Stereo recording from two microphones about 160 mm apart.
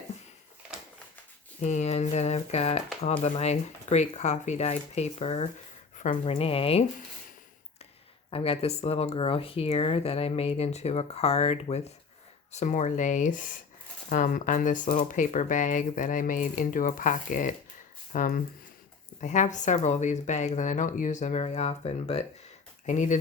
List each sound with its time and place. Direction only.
1.6 s speech: 45° left (ahead or behind)
8.3 s speech: 35° left (ahead or behind)